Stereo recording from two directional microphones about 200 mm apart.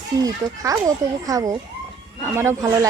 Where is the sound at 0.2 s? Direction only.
15° right (ahead or behind).